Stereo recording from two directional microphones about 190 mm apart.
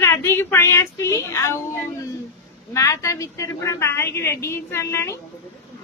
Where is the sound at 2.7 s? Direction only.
15° left (ahead or behind).